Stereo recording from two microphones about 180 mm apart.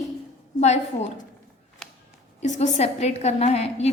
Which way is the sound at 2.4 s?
40° left (ahead or behind).